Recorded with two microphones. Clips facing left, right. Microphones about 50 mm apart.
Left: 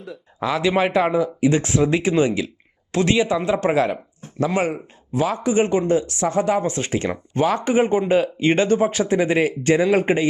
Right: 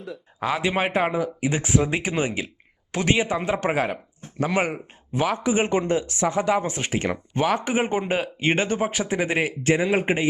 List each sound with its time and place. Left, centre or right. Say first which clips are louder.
0.4 s speech: left 4 dB; right